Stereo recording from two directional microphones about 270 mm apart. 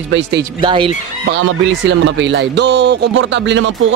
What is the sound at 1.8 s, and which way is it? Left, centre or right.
Speech, right.